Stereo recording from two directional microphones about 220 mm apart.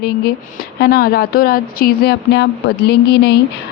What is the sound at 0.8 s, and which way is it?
Speech, 45° left (ahead or behind).